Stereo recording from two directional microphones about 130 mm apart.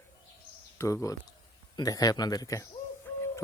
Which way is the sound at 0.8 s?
25° left (ahead or behind).